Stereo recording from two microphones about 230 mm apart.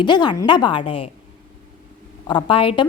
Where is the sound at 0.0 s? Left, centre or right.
Centre.